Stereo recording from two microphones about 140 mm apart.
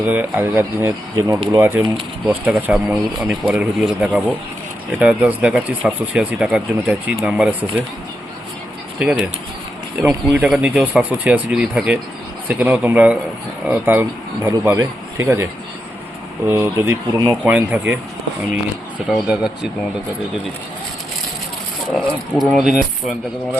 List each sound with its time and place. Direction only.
0.0 s speech: 10° right (ahead or behind)
9.0 s speech: 5° right (ahead or behind)
16.5 s speech: 20° right (ahead or behind)
17.4 s speech: 10° right (ahead or behind)
19.0 s speech: 5° right (ahead or behind)
21.8 s speech: centre (ahead or behind)